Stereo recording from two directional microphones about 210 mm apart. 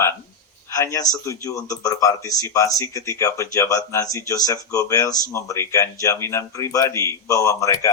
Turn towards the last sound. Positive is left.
turn(degrees=15)  # may be behind; listen again after turning